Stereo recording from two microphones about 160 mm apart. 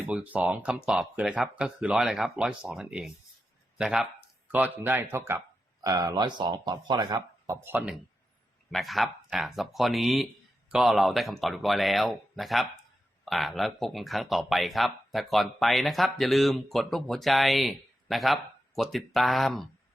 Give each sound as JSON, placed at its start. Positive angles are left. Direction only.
{"t": 0.1, "sound": "speech", "side_deg": -10}